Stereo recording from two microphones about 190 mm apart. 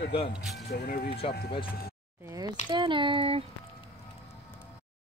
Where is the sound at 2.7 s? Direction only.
25° right (ahead or behind).